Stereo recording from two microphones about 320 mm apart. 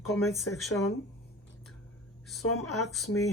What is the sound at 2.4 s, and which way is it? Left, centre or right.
Speech, left.